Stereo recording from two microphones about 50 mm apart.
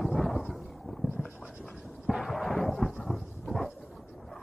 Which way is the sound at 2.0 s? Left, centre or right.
Centre.